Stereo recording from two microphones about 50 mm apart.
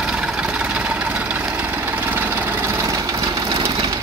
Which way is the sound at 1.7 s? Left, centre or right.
Right.